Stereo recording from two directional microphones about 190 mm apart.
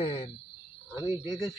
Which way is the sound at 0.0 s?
30° left (ahead or behind).